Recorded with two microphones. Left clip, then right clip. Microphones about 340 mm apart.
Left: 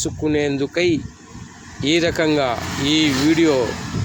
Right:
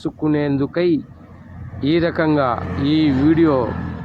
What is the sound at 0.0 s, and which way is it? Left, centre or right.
Speech, right.